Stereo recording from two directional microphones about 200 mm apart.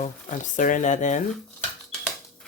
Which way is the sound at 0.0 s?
40° left (ahead or behind).